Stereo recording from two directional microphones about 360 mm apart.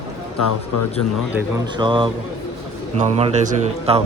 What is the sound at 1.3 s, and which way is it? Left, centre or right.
Speech, centre.